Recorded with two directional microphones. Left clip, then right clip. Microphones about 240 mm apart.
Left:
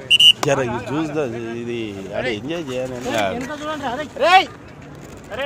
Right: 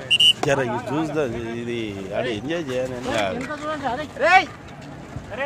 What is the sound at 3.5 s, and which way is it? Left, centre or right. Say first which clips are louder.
Speech: left 1 dB; left.